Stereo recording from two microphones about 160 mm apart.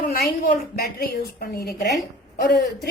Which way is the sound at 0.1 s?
65° left (ahead or behind).